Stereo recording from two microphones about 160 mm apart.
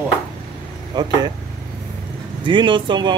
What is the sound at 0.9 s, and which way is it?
Speech, 25° right (ahead or behind).